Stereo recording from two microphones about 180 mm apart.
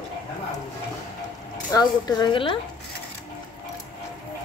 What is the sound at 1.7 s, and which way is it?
Speech, 25° left (ahead or behind).